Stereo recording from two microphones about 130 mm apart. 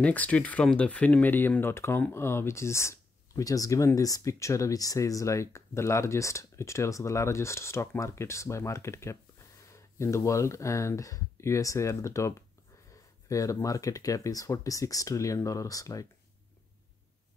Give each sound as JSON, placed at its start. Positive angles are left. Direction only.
{"t": 0.0, "sound": "speech", "side_deg": 10}